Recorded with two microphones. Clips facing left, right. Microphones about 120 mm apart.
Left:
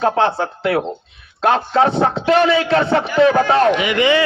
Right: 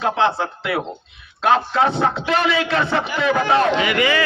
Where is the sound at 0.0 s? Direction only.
40° left (ahead or behind).